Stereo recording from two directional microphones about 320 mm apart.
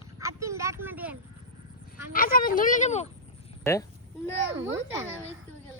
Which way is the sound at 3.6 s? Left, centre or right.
Centre.